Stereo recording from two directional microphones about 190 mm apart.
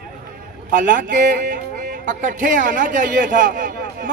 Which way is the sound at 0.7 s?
45° right (ahead or behind).